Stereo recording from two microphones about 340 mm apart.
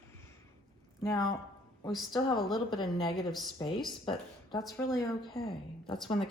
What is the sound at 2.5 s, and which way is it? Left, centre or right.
Speech, centre.